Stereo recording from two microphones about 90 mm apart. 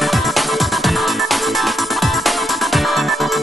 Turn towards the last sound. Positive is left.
turn(degrees=0)  # may be behind; listen again after turning